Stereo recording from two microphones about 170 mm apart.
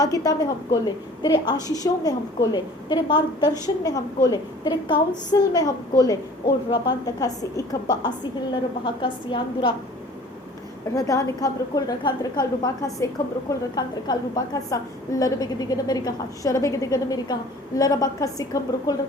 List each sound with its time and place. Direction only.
0.0 s a woman's voice: 20° left (ahead or behind)
10.9 s a woman's voice: 20° left (ahead or behind)